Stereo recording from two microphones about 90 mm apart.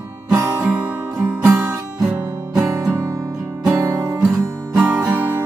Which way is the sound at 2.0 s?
20° right (ahead or behind).